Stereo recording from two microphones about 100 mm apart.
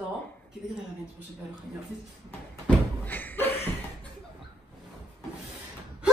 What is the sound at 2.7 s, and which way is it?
Door, 15° left (ahead or behind).